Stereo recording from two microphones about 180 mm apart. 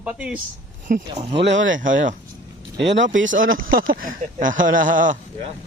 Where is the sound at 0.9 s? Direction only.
45° right (ahead or behind).